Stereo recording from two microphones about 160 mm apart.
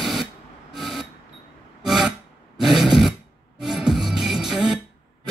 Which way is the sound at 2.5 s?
5° right (ahead or behind).